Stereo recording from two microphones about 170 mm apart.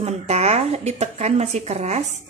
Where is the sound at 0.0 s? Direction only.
40° right (ahead or behind).